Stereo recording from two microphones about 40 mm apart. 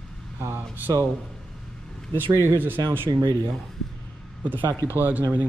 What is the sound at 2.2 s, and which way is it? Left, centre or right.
Speech, right.